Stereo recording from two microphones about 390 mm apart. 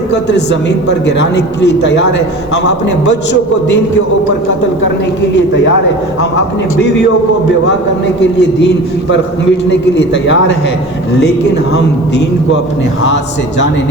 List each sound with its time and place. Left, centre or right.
0.1 s a man's voice: left
8.2 s a man's voice: left